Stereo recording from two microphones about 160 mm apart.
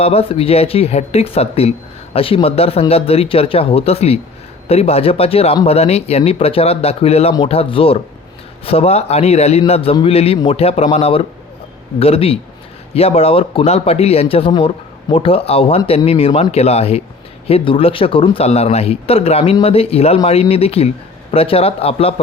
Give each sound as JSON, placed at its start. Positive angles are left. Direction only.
{"t": 0.0, "sound": "a man's voice", "side_deg": 35}